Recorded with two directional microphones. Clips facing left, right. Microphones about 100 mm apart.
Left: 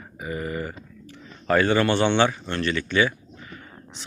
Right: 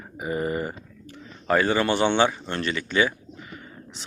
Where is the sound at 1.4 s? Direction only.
15° right (ahead or behind).